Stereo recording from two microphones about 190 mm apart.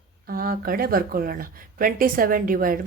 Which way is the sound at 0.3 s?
50° right (ahead or behind).